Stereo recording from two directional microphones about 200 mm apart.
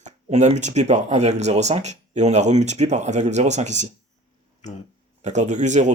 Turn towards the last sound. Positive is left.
turn(degrees=-35)  # may be behind; listen again after turning